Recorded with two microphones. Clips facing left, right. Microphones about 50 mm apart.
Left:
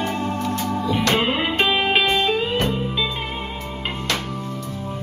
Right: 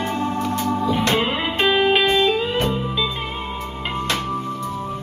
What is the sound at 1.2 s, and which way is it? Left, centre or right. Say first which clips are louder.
Music: even; centre.